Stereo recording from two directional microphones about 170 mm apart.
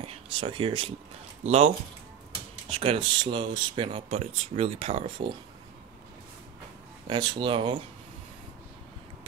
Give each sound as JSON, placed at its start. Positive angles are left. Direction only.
{"t": 0.0, "sound": "speech", "side_deg": -35}
{"t": 2.7, "sound": "speech", "side_deg": -35}
{"t": 7.1, "sound": "speech", "side_deg": -25}